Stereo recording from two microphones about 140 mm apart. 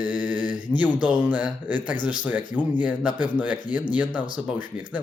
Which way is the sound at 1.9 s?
30° left (ahead or behind).